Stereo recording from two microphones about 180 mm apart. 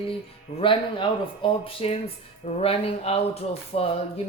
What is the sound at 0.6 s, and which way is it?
Speech, 30° left (ahead or behind).